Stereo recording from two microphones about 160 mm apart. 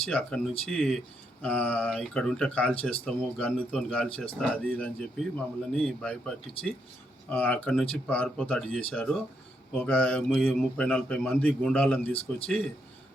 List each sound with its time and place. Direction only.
0.1 s a man's voice: 5° left (ahead or behind)